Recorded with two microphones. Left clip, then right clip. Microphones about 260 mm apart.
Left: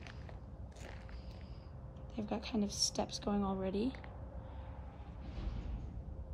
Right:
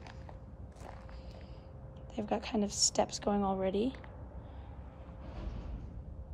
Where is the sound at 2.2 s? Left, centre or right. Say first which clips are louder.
Right 5 dB; centre.